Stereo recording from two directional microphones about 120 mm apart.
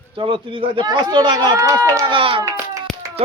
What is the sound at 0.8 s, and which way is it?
Speech, 35° right (ahead or behind).